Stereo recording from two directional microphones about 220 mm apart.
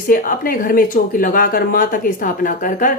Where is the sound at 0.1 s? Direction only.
40° left (ahead or behind).